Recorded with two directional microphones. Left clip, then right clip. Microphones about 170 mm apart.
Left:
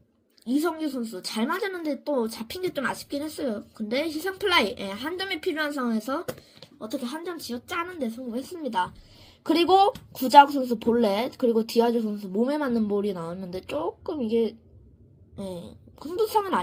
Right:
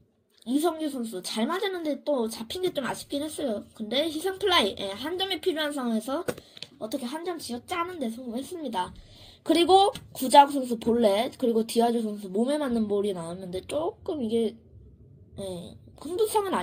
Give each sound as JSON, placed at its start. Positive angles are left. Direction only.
{"t": 0.6, "sound": "a woman's voice", "side_deg": 15}
{"t": 15.4, "sound": "a woman's voice", "side_deg": 15}